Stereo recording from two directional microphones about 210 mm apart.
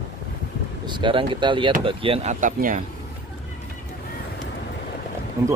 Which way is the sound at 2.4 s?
40° right (ahead or behind).